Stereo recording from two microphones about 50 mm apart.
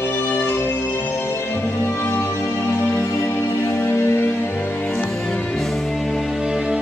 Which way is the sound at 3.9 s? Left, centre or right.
Left.